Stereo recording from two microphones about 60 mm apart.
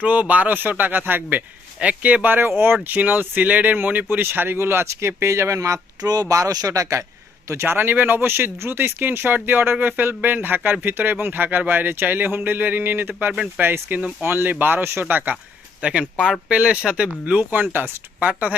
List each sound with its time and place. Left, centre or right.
0.0 s a man's voice: right
4.3 s speech: right
7.6 s speech: right
15.8 s a man's voice: centre